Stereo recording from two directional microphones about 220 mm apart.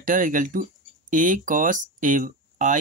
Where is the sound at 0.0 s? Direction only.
35° right (ahead or behind).